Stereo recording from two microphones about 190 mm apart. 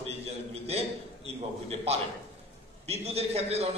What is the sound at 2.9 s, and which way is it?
Speech, 35° right (ahead or behind).